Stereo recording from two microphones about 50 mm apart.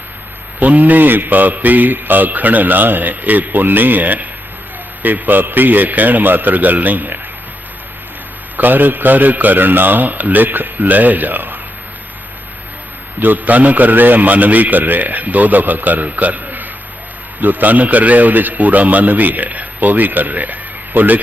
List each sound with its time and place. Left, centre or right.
0.6 s a man's voice: right
8.5 s a man's voice: right
13.1 s a man's voice: right